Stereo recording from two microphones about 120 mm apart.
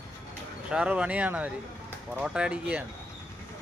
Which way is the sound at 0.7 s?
10° right (ahead or behind).